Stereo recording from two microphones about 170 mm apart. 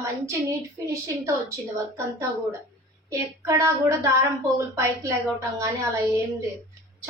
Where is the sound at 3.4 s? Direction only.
20° right (ahead or behind).